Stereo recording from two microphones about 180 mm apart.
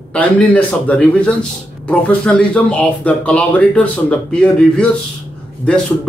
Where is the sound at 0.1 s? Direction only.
10° left (ahead or behind).